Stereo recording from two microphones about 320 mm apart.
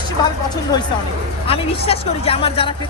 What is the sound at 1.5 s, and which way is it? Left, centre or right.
Speech, centre.